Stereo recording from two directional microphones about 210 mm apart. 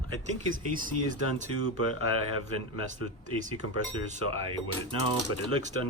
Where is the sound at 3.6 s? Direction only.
75° left (ahead or behind).